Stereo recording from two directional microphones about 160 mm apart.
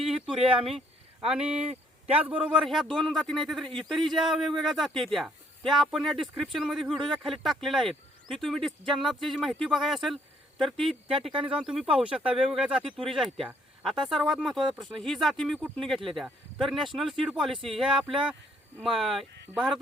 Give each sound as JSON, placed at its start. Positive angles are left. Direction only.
{"t": 0.0, "sound": "a sound", "side_deg": 0}
{"t": 1.3, "sound": "a man's voice", "side_deg": -5}
{"t": 11.3, "sound": "speech", "side_deg": -35}
{"t": 11.5, "sound": "speech", "side_deg": -5}